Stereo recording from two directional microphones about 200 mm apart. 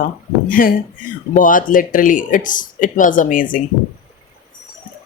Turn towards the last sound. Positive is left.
turn(degrees=45)  # may be behind; listen again after turning